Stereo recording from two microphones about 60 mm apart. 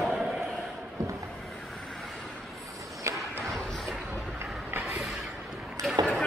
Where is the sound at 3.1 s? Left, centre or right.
Right.